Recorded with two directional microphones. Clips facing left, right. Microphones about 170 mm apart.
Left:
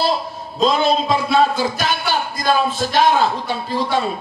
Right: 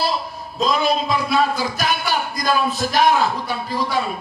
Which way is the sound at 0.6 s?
25° left (ahead or behind).